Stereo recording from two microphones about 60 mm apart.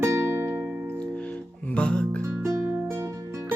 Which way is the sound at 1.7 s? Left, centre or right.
Left.